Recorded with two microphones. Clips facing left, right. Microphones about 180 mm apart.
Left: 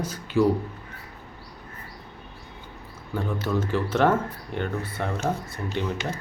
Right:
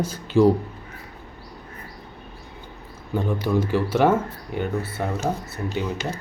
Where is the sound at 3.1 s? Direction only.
15° right (ahead or behind).